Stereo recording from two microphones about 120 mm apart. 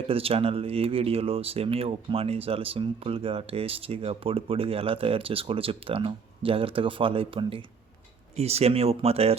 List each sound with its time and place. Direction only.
0.1 s speech: 50° right (ahead or behind)
8.4 s speech: 60° right (ahead or behind)